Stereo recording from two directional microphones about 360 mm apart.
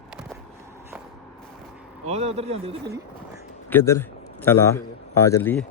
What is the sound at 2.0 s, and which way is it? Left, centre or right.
Speech, centre.